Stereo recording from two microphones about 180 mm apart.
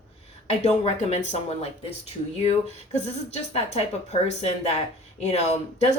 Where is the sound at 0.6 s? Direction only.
40° left (ahead or behind).